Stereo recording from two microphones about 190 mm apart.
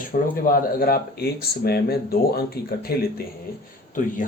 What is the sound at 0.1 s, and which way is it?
Speech, 45° left (ahead or behind).